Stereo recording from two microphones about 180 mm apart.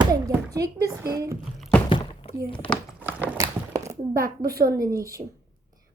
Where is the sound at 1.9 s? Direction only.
30° left (ahead or behind).